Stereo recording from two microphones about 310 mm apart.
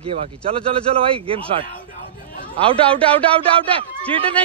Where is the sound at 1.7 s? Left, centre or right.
Left.